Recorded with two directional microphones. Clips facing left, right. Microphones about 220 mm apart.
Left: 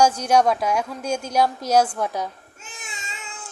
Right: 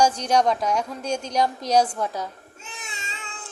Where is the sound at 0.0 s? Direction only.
10° left (ahead or behind).